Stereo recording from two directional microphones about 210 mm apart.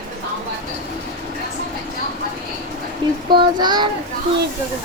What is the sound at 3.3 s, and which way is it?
Speech, 20° right (ahead or behind).